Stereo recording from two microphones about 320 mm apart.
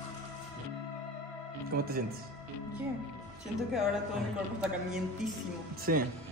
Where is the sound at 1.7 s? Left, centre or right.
Right.